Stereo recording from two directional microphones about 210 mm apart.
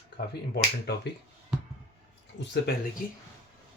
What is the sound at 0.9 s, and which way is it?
Speech, 50° left (ahead or behind).